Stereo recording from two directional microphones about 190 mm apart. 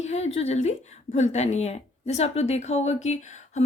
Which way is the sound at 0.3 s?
35° left (ahead or behind).